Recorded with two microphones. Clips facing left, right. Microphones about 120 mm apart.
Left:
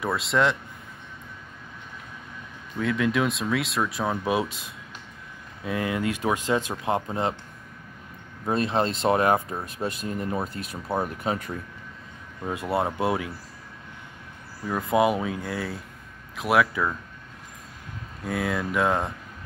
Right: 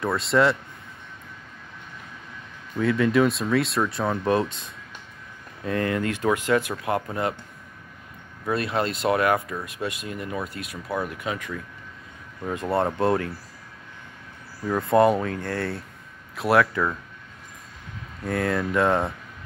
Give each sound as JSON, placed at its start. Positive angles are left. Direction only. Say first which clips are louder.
{"t": 0.0, "sound": "speech", "louder": "right 3 dB", "side_deg": 0}
{"t": 2.8, "sound": "speech", "louder": "right 4 dB", "side_deg": 0}
{"t": 8.5, "sound": "speech", "louder": "left 1 dB", "side_deg": 30}
{"t": 12.7, "sound": "speech", "louder": "right 3 dB", "side_deg": 5}
{"t": 14.7, "sound": "speech", "louder": "right 3 dB", "side_deg": 5}
{"t": 18.2, "sound": "speech", "louder": "right 3 dB", "side_deg": 5}